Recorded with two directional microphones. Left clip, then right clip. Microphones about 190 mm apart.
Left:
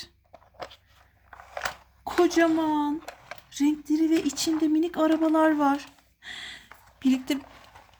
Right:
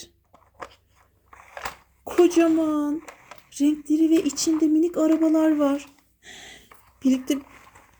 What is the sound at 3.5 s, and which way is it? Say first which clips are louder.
Female singing: right 3 dB; 30° left (ahead or behind).